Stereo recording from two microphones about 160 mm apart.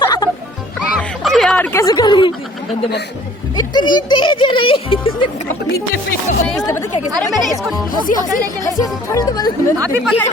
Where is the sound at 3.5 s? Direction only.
25° left (ahead or behind).